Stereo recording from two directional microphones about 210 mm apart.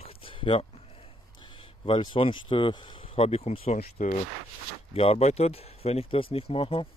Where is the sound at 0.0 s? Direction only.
25° left (ahead or behind).